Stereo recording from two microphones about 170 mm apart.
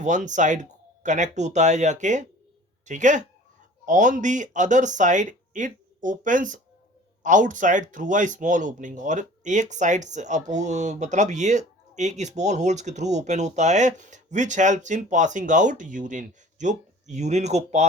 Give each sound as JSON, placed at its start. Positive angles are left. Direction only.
{"t": 0.0, "sound": "speech", "side_deg": -45}